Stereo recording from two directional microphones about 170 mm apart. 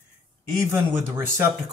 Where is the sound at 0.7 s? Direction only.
15° right (ahead or behind).